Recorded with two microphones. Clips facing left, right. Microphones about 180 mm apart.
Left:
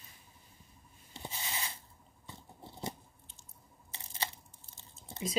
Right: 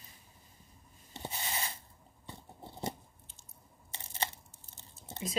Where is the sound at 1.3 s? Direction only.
55° right (ahead or behind).